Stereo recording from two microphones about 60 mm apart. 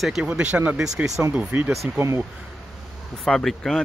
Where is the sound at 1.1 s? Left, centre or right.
Right.